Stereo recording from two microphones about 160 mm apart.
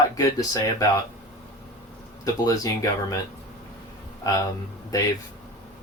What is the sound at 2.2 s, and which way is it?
Speech, 20° left (ahead or behind).